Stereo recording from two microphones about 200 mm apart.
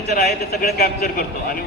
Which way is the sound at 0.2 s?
50° left (ahead or behind).